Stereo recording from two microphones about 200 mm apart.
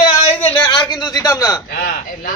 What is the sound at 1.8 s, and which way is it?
Speech, 45° left (ahead or behind).